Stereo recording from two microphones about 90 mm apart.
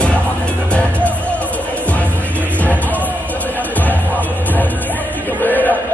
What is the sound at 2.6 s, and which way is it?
Music, 15° left (ahead or behind).